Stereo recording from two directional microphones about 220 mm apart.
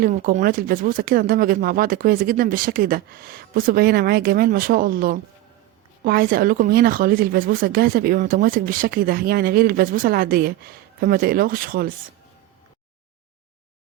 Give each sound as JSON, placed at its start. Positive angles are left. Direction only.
{"t": 0.0, "sound": "speech", "side_deg": -35}